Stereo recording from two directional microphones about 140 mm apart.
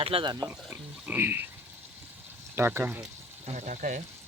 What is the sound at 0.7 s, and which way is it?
Speech, 15° right (ahead or behind).